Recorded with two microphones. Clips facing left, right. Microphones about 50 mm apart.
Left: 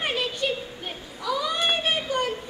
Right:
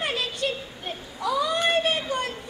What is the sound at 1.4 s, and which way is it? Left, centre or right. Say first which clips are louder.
Children playing: right 2 dB; centre.